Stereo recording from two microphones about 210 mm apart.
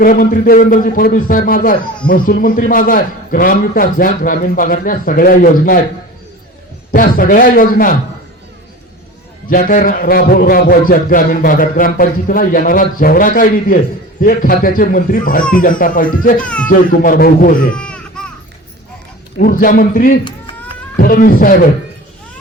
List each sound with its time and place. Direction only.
0.0 s a man's voice: 45° left (ahead or behind)
6.9 s a man's voice: 40° left (ahead or behind)
9.5 s a man's voice: 40° left (ahead or behind)
16.4 s speech: 5° left (ahead or behind)
16.6 s a man's voice: 40° left (ahead or behind)
17.7 s a sound: 5° left (ahead or behind)
19.4 s a man's voice: 40° left (ahead or behind)